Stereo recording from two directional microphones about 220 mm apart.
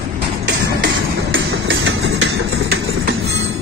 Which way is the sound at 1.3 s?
60° right (ahead or behind).